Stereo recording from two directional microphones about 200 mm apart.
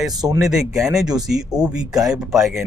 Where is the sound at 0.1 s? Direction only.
20° right (ahead or behind).